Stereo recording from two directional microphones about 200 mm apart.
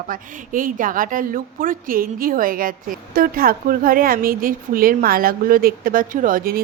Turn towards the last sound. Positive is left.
turn(degrees=-45)  # may be behind; listen again after turning